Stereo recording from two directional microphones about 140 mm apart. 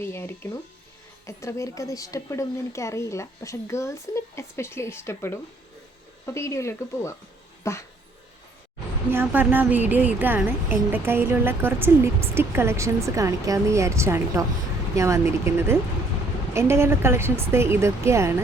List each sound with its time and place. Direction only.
0.0 s a woman's voice: 15° left (ahead or behind)
9.0 s a woman's voice: 15° right (ahead or behind)